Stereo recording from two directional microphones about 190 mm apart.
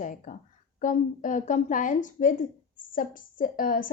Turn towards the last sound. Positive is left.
turn(degrees=50)  # may be behind; listen again after turning